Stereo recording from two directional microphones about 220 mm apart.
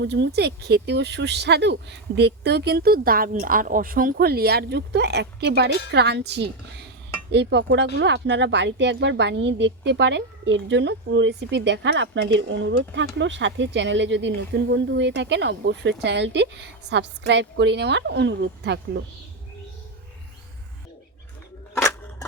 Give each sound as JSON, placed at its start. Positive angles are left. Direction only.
{"t": 0.0, "sound": "a woman's voice", "side_deg": -50}
{"t": 21.8, "sound": "scissors", "side_deg": 10}